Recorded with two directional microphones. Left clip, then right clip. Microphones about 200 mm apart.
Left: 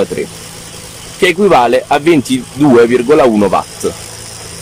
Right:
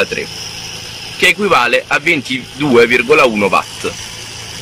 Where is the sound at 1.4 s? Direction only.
20° left (ahead or behind).